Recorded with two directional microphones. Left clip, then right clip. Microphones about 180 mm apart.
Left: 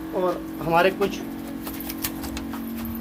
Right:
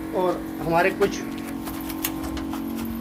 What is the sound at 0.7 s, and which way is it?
Speech, 25° left (ahead or behind).